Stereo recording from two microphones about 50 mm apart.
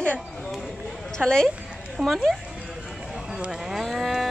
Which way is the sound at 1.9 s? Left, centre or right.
Centre.